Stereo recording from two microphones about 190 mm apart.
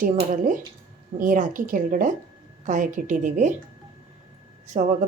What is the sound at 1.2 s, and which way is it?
A woman's voice, 45° right (ahead or behind).